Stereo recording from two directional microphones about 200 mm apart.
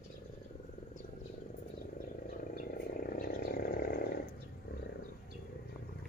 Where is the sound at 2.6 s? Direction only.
45° left (ahead or behind).